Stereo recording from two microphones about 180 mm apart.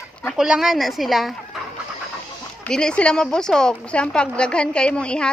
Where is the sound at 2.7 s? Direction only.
5° left (ahead or behind).